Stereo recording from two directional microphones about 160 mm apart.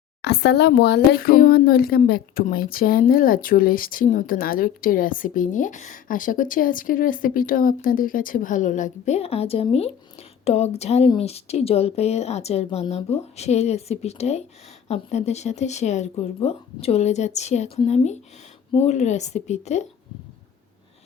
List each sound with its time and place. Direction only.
0.2 s a woman's voice: 90° left; by 19.9 s 45° left (ahead or behind)